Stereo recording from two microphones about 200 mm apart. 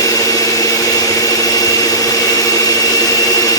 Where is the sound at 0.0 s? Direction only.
15° left (ahead or behind).